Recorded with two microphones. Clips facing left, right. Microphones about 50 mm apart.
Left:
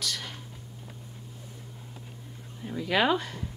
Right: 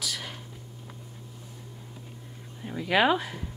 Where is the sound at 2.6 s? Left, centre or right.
Centre.